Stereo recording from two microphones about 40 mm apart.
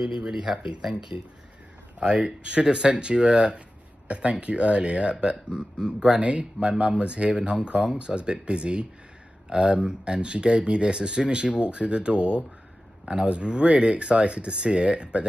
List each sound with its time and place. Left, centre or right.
0.0 s speech: centre
2.0 s speech: right